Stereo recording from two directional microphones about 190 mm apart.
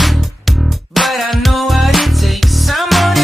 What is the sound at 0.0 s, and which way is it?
Music, centre (ahead or behind).